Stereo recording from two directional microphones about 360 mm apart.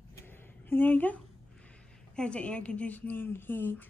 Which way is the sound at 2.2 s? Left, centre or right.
Centre.